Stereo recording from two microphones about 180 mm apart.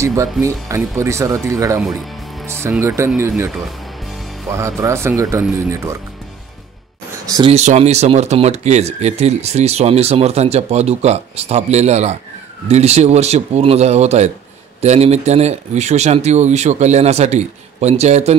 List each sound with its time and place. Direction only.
0.0 s speech: 15° right (ahead or behind)
1.8 s speech: centre (ahead or behind)
3.2 s speech: 15° right (ahead or behind)
4.5 s speech: 15° right (ahead or behind)
7.2 s speech: 20° right (ahead or behind)
7.5 s speech: 40° right (ahead or behind)